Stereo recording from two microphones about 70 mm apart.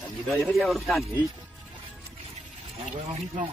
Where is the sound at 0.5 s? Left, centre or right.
Centre.